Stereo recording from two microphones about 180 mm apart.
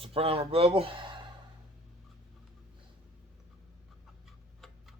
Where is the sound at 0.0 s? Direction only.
30° right (ahead or behind).